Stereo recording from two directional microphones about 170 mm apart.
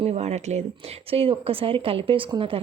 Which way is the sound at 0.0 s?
40° right (ahead or behind).